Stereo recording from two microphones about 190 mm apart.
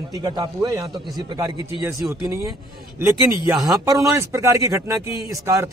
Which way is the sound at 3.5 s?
Centre (ahead or behind).